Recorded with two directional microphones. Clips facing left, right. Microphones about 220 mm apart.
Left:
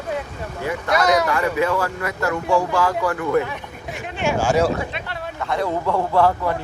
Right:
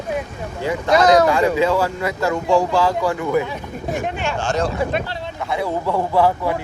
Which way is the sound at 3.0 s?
15° right (ahead or behind).